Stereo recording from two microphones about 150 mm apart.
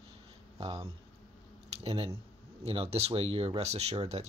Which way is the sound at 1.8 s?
40° right (ahead or behind).